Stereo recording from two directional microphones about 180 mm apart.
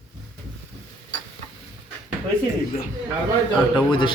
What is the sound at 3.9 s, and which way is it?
Speech, 25° left (ahead or behind).